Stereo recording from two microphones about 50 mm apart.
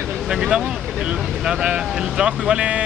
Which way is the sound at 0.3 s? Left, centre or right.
Centre.